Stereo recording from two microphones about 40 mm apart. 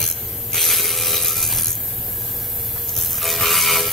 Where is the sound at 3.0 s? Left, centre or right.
Centre.